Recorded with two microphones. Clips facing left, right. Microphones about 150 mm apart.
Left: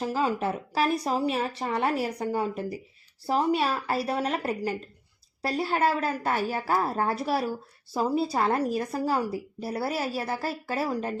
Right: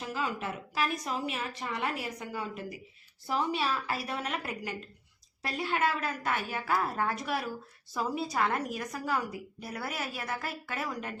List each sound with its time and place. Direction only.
0.0 s a woman's voice: 35° left (ahead or behind)